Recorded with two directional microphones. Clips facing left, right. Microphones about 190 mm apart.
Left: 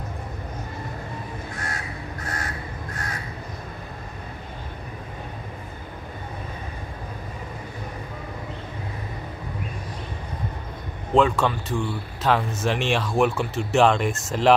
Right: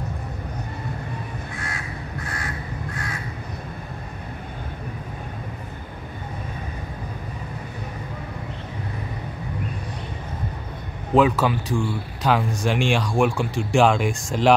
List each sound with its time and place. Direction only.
2.2 s crow: 40° left (ahead or behind)
11.1 s speech: 5° right (ahead or behind)